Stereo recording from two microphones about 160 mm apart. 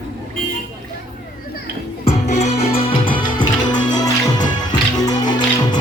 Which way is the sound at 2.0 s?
45° left (ahead or behind).